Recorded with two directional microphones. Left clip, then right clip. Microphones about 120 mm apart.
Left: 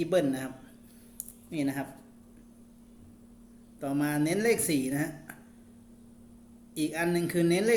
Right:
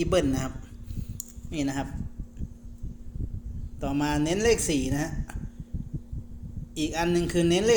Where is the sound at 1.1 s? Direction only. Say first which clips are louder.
Right 2 dB; 30° right (ahead or behind).